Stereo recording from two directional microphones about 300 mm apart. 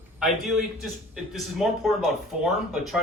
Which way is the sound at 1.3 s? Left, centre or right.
Centre.